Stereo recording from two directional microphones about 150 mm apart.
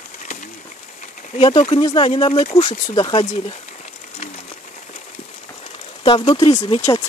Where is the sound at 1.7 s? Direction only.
30° left (ahead or behind).